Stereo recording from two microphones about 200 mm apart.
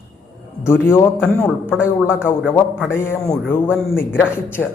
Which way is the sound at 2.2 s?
5° right (ahead or behind).